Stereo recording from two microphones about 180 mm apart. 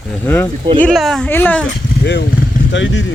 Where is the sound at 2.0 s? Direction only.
70° left (ahead or behind).